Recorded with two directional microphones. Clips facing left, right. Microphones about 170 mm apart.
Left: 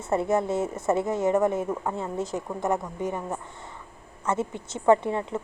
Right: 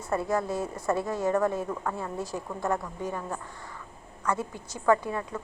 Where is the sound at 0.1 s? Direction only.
25° left (ahead or behind).